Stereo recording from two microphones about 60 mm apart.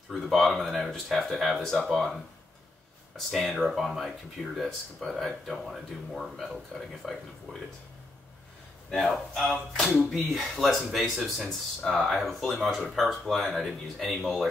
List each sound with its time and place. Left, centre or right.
0.2 s speech: centre
3.3 s speech: centre
9.1 s speech: centre
9.8 s speech: centre
10.1 s speech: centre